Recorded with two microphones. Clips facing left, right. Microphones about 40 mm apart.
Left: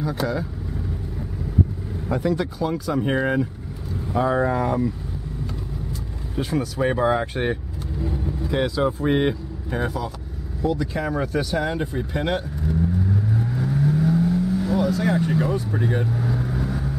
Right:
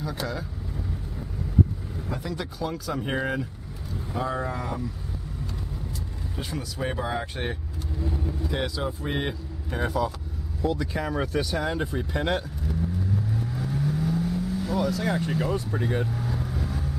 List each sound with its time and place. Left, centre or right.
0.0 s speech: centre
2.0 s speech: left
2.3 s speech: centre
4.1 s speech: left
6.3 s speech: centre
13.6 s vehicle: centre
14.9 s speech: centre